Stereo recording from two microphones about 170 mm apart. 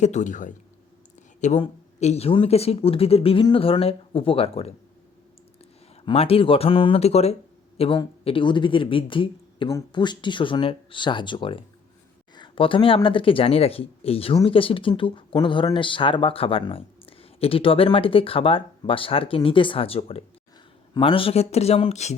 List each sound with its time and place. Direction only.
0.0 s a man's voice: 45° left (ahead or behind)
6.1 s speech: 35° left (ahead or behind)